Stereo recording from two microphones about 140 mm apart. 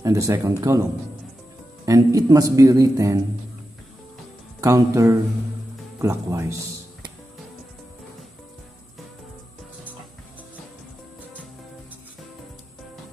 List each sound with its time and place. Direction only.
0.0 s a man's voice: 20° right (ahead or behind)
1.9 s a man's voice: 25° right (ahead or behind)
4.6 s a man's voice: 25° right (ahead or behind)